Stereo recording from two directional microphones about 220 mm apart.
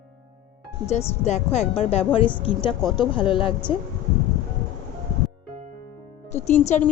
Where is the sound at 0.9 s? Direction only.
30° left (ahead or behind).